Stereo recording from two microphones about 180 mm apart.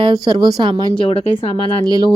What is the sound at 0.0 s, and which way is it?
Speech, 25° right (ahead or behind).